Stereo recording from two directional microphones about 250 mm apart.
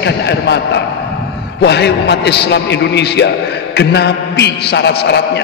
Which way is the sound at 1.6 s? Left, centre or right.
Left.